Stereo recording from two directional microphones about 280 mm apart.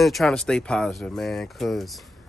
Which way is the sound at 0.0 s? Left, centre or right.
Centre.